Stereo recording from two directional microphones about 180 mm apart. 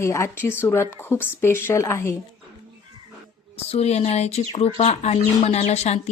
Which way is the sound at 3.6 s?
35° left (ahead or behind).